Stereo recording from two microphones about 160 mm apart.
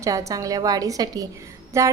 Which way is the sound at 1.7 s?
20° right (ahead or behind).